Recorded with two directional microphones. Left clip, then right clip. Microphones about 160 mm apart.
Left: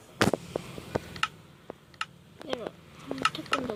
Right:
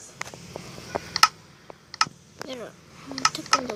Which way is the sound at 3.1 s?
55° right (ahead or behind).